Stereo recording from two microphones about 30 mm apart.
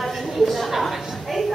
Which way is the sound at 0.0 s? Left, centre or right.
Centre.